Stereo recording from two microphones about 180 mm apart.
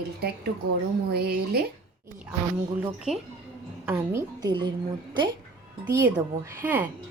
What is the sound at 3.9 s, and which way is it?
Speech, 15° right (ahead or behind).